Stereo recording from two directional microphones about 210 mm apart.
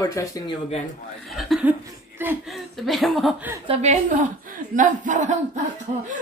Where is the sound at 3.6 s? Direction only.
30° right (ahead or behind).